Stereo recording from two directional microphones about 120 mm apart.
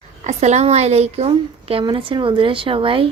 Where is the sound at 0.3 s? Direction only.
70° right (ahead or behind).